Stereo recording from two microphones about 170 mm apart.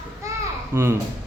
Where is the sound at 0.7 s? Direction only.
15° right (ahead or behind).